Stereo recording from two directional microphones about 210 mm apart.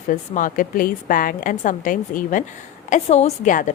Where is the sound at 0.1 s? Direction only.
40° left (ahead or behind).